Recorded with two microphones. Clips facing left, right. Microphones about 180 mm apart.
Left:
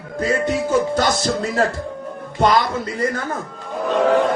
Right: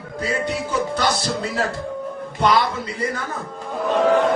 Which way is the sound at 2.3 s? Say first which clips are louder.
Left 2 dB; 45° left (ahead or behind).